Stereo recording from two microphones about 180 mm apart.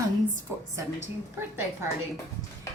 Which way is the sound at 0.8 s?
15° right (ahead or behind).